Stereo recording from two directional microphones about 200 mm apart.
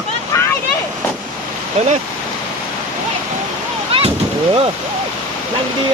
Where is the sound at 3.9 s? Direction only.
30° right (ahead or behind).